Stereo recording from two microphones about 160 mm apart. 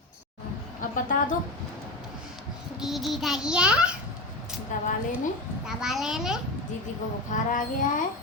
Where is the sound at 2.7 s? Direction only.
Centre (ahead or behind).